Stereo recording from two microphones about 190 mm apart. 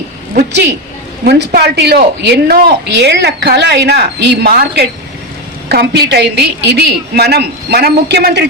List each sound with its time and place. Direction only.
1.2 s a woman's voice: 55° right (ahead or behind)